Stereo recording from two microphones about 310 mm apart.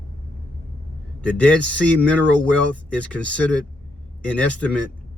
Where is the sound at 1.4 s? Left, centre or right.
Centre.